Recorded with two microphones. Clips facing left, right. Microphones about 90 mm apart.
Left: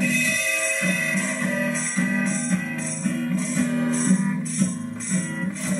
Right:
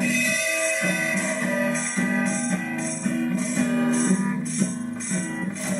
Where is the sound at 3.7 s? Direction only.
45° right (ahead or behind).